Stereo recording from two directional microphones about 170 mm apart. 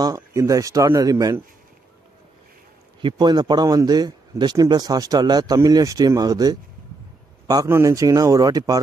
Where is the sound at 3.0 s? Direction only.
25° right (ahead or behind).